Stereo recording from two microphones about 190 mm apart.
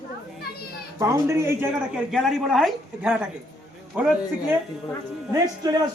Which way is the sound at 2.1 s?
Centre (ahead or behind).